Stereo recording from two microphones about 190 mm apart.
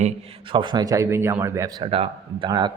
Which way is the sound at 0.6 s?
25° right (ahead or behind).